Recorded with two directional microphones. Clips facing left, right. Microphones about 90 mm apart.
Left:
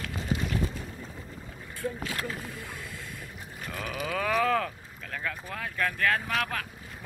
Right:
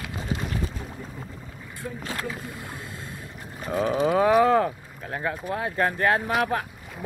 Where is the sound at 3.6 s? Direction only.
30° right (ahead or behind).